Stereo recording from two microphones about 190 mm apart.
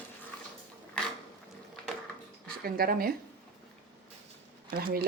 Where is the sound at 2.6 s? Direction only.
50° right (ahead or behind).